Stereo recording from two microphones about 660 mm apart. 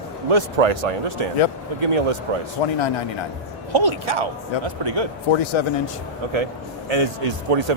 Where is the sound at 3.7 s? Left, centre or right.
Right.